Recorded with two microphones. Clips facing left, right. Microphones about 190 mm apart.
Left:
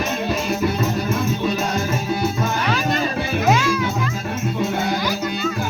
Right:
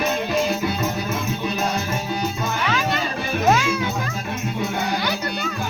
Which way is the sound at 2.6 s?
40° left (ahead or behind).